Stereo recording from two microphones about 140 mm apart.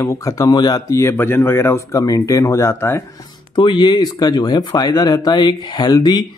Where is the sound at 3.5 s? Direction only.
35° left (ahead or behind).